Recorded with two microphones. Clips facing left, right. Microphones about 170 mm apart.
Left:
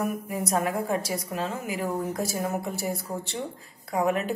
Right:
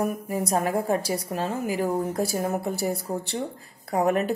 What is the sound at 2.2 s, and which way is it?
Speech, 60° right (ahead or behind).